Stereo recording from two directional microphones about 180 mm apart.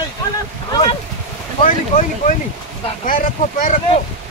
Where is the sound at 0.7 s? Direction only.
25° left (ahead or behind).